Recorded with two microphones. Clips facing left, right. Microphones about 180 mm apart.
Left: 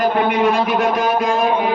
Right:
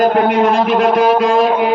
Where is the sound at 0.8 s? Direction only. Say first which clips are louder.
Right 6 dB; 70° right (ahead or behind).